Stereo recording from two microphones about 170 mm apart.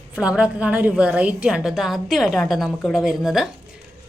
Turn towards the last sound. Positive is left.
turn(degrees=-5)  # may be behind; listen again after turning